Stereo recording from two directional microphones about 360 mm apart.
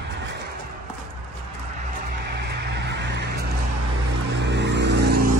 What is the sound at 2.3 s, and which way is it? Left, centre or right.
Vehicle, right.